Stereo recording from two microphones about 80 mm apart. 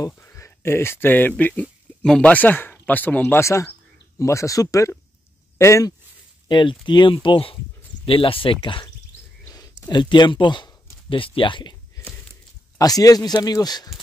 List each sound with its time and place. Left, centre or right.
0.2 s speech: left
3.4 s speech: left
6.5 s speech: left
9.5 s speech: left
12.7 s a man's voice: left